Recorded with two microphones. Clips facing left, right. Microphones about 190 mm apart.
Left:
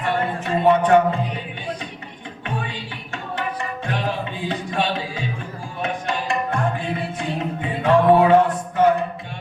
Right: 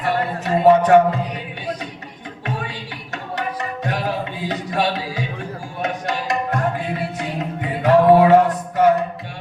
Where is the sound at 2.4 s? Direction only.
40° right (ahead or behind).